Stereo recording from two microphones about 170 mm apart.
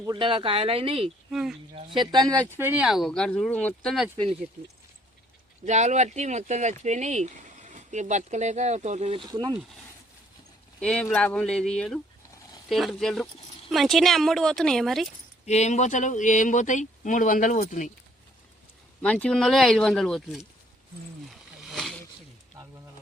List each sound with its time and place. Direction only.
0.0 s speech: 30° right (ahead or behind)
1.3 s speech: centre (ahead or behind)
1.7 s speech: 30° right (ahead or behind); by 4.1 s centre (ahead or behind)
5.6 s speech: 45° right (ahead or behind); by 9.6 s 25° right (ahead or behind)
10.8 s speech: 5° left (ahead or behind)
15.4 s speech: 40° left (ahead or behind)
19.0 s speech: 5° left (ahead or behind)
21.2 s a sound: centre (ahead or behind)